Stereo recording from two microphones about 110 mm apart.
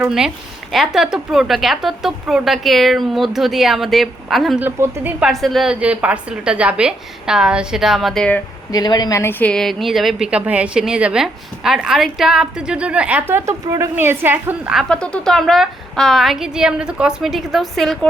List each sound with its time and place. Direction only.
0.0 s a woman's voice: 5° right (ahead or behind)
4.6 s a woman's voice: 15° right (ahead or behind)
5.2 s a woman's voice: centre (ahead or behind)
5.8 s a woman's voice: 10° right (ahead or behind); by 8.4 s 5° left (ahead or behind)
8.7 s speech: 40° left (ahead or behind)
9.2 s a woman's voice: 10° left (ahead or behind); by 14.7 s 20° right (ahead or behind)
14.8 s a woman's voice: 10° left (ahead or behind)